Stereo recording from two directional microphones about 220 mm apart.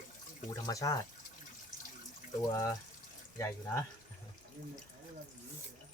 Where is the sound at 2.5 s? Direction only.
15° left (ahead or behind).